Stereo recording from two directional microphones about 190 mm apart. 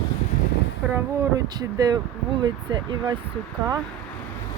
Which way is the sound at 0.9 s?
15° right (ahead or behind).